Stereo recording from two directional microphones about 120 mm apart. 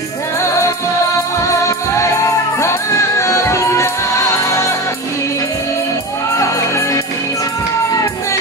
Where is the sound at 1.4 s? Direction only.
25° left (ahead or behind).